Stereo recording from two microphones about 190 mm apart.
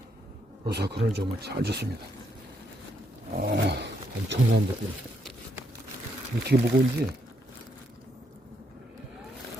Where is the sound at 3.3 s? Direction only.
55° right (ahead or behind).